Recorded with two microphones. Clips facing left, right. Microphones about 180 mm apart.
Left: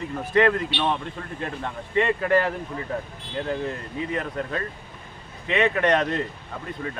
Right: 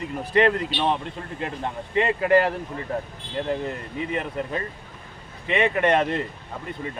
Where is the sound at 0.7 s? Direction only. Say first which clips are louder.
Right 1 dB; 45° right (ahead or behind).